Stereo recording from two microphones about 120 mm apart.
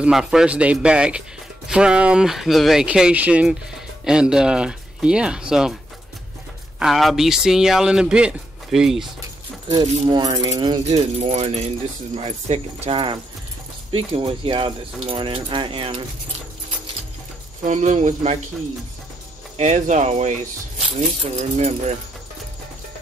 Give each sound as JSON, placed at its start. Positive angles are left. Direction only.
{"t": 0.0, "sound": "speech", "side_deg": -5}
{"t": 6.8, "sound": "speech", "side_deg": 0}
{"t": 9.7, "sound": "speech", "side_deg": -35}
{"t": 10.9, "sound": "speech", "side_deg": -65}
{"t": 13.9, "sound": "speech", "side_deg": -50}
{"t": 17.6, "sound": "speech", "side_deg": -90}
{"t": 19.5, "sound": "speech", "side_deg": -70}
{"t": 21.4, "sound": "speech", "side_deg": -70}